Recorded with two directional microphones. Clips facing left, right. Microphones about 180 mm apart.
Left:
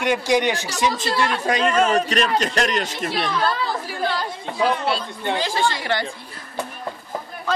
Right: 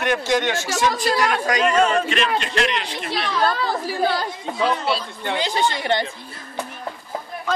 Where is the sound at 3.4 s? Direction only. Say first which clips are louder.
Right 2 dB; 40° right (ahead or behind).